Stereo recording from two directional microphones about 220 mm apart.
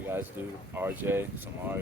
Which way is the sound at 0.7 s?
10° right (ahead or behind).